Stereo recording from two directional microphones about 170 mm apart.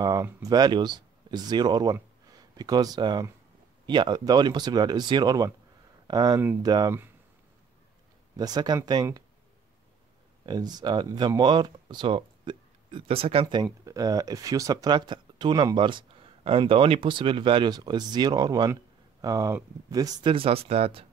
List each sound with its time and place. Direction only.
0.0 s speech: 20° right (ahead or behind)
6.4 s speech: 10° right (ahead or behind)
6.7 s speech: 25° right (ahead or behind)
8.4 s speech: 25° right (ahead or behind)
10.4 s speech: 25° right (ahead or behind)